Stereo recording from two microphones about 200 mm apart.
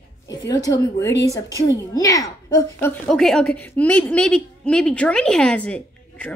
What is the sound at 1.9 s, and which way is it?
Speech, 15° left (ahead or behind).